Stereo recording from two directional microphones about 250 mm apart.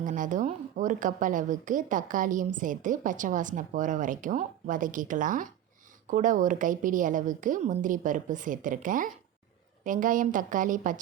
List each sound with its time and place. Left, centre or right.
0.0 s a woman's voice: right